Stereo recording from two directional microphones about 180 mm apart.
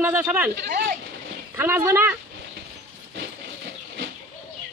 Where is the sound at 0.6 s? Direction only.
60° right (ahead or behind).